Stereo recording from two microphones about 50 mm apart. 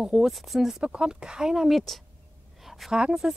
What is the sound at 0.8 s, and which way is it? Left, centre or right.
Speech, centre.